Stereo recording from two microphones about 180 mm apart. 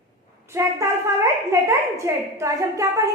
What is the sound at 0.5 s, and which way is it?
A woman's voice, 15° right (ahead or behind).